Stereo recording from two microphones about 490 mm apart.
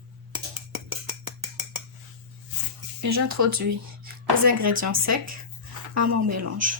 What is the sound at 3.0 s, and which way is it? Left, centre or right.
Speech, right.